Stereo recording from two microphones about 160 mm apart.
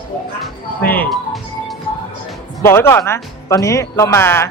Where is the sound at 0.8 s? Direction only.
10° left (ahead or behind).